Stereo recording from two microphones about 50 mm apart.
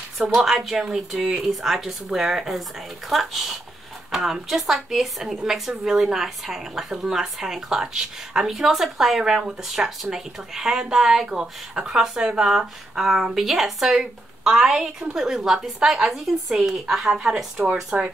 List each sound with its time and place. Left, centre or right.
0.2 s a woman's voice: centre
17.1 s speech: centre